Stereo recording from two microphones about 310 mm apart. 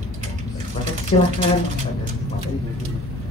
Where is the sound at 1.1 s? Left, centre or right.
Centre.